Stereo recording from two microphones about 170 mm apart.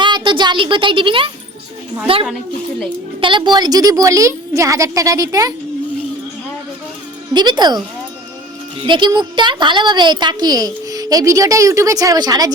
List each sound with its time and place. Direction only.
0.0 s speech: 25° right (ahead or behind)
3.2 s a woman's voice: 30° right (ahead or behind)
7.3 s a woman's voice: 25° right (ahead or behind)
8.9 s a woman's voice: 25° right (ahead or behind)